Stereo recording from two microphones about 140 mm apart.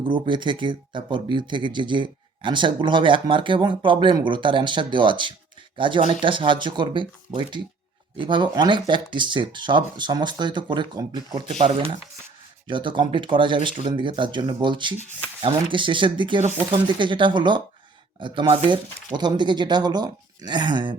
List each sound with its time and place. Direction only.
0.0 s speech: 35° right (ahead or behind)
11.5 s speech: 55° right (ahead or behind)
12.6 s speech: 35° right (ahead or behind)